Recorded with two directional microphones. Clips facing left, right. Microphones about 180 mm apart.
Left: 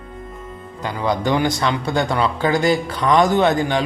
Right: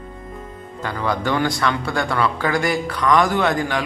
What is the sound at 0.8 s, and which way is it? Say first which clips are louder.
A man's voice: left 2 dB; 15° left (ahead or behind).